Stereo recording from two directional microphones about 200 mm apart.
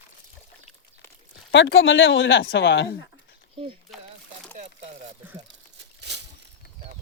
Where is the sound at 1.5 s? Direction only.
65° left (ahead or behind).